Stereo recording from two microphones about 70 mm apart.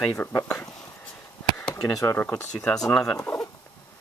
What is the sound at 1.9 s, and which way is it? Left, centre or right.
Speech, left.